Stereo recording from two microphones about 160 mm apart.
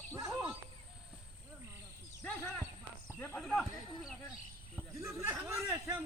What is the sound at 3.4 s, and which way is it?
Speech, 5° left (ahead or behind).